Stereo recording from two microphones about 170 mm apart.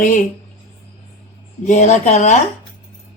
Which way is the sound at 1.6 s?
45° left (ahead or behind).